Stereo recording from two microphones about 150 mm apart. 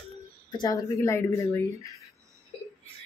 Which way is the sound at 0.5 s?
25° left (ahead or behind).